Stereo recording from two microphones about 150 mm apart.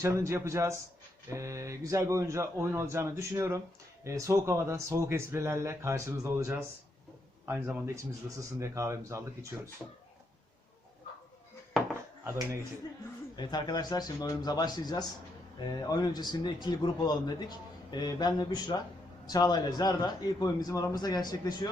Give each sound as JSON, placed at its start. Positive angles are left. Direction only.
{"t": 0.0, "sound": "speech", "side_deg": -20}
{"t": 12.2, "sound": "speech", "side_deg": -20}
{"t": 13.3, "sound": "a man's voice", "side_deg": 30}